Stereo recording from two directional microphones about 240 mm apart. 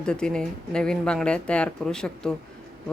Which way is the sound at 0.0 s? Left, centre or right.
Centre.